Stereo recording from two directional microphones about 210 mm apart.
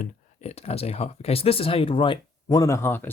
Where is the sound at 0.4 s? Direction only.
30° left (ahead or behind).